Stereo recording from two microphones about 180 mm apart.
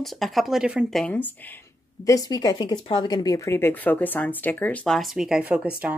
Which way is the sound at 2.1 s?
20° left (ahead or behind).